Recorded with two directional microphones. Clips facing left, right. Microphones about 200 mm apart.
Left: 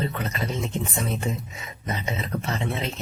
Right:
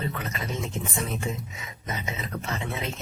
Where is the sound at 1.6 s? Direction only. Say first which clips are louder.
Left 3 dB; 35° left (ahead or behind).